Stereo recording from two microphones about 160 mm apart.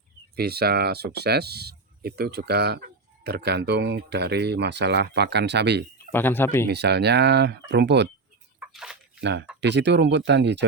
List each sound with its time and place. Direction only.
0.3 s speech: 80° right
6.1 s speech: 10° left (ahead or behind)
6.7 s speech: 90° right
8.5 s a sound: 5° right (ahead or behind)
9.2 s speech: 90° right